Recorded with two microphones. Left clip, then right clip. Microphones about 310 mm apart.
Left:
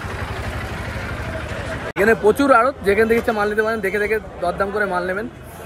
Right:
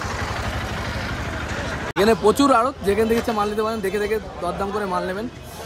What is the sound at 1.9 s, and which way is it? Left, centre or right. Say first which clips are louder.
Speech: left 2 dB; centre.